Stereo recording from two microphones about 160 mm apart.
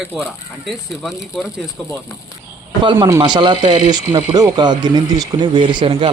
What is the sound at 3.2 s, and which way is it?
Speech, 30° right (ahead or behind).